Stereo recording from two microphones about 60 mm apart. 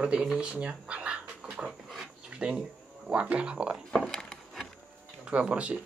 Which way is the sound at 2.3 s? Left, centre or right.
Centre.